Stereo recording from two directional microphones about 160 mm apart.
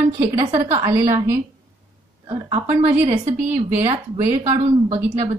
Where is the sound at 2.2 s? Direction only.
40° right (ahead or behind).